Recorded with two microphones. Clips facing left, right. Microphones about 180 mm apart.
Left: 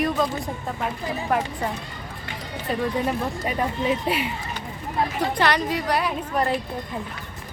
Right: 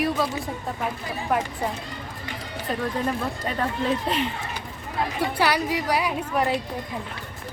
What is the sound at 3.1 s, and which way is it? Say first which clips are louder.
Speech: left 2 dB; 10° left (ahead or behind).